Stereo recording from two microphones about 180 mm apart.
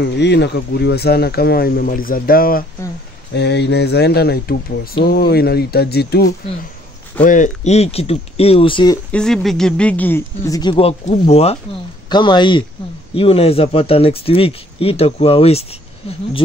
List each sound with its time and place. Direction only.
0.0 s speech: 70° left (ahead or behind); by 2.6 s 55° left (ahead or behind)
3.3 s speech: 70° left (ahead or behind)
7.2 s speech: 45° left (ahead or behind); by 9.0 s 25° left (ahead or behind)
9.1 s speech: 5° left (ahead or behind); by 11.5 s 35° left (ahead or behind)
12.1 s speech: 25° left (ahead or behind)